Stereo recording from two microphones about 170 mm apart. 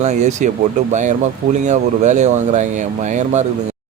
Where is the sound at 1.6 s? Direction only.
45° right (ahead or behind).